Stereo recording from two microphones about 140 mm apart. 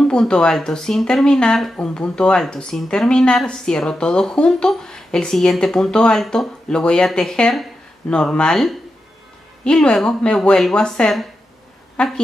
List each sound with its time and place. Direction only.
0.0 s speech: 5° left (ahead or behind)